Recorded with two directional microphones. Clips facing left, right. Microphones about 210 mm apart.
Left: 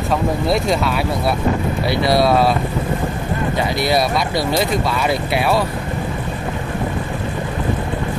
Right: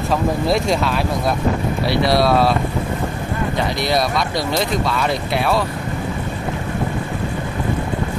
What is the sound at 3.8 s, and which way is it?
Speech, 5° left (ahead or behind).